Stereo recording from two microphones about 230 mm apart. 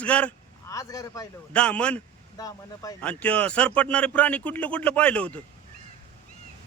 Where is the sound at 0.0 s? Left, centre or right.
Centre.